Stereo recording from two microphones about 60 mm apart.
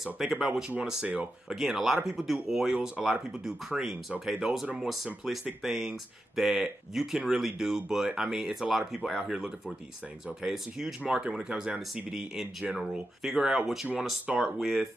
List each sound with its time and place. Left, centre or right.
0.0 s speech: centre
0.7 s speech: centre
1.5 s speech: centre
11.0 s speech: right
14.6 s speech: centre